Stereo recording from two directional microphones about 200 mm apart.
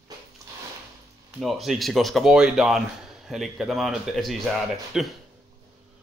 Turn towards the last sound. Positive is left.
turn(degrees=0)  # may be behind; listen again after turning